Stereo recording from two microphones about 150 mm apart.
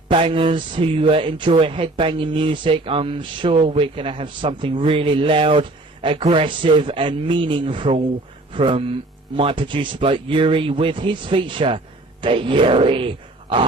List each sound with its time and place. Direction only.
0.1 s speech: 35° right (ahead or behind)